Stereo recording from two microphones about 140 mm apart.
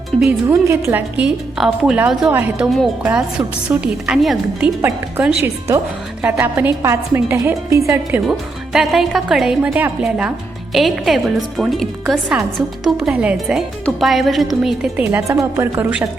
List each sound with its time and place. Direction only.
0.4 s a woman's voice: 20° right (ahead or behind); by 4.7 s 5° right (ahead or behind)
4.8 s a woman's voice: 15° right (ahead or behind)
8.3 s a woman's voice: 5° right (ahead or behind)
14.9 s a woman's voice: 20° right (ahead or behind)